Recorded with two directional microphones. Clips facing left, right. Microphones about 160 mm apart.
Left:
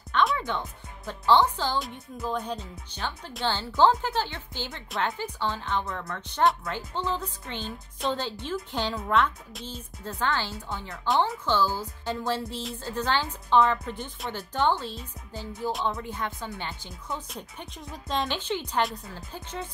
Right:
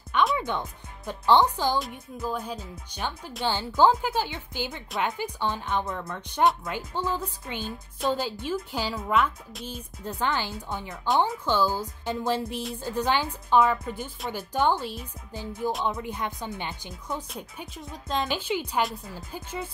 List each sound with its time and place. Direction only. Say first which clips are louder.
0.4 s a woman's voice: right 1 dB; 15° right (ahead or behind)
1.8 s speech: right 1 dB; 5° right (ahead or behind)
2.9 s a woman's voice: right 2 dB; 15° right (ahead or behind)
9.7 s a woman's voice: right 2 dB; 15° right (ahead or behind)
17.3 s speech: right 1 dB; 5° right (ahead or behind)
19.1 s a woman's voice: right 2 dB; 10° right (ahead or behind)